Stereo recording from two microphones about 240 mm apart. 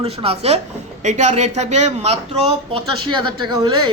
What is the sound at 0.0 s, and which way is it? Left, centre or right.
A man's voice, right.